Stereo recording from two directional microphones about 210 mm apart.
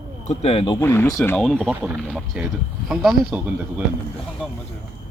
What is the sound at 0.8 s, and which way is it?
Speech, 10° left (ahead or behind).